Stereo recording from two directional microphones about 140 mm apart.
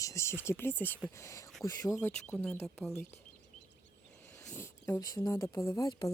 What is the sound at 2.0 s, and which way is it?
Speech, 10° left (ahead or behind).